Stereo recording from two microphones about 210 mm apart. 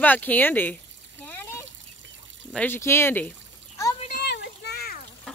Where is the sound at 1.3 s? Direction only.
10° left (ahead or behind).